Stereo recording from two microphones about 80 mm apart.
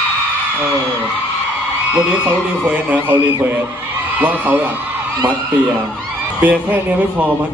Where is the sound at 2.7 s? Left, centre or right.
Centre.